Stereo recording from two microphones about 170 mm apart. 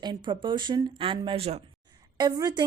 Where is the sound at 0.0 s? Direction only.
25° right (ahead or behind).